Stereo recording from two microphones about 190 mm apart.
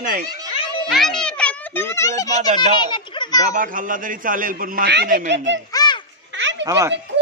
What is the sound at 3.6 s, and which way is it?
A man's voice, 45° right (ahead or behind).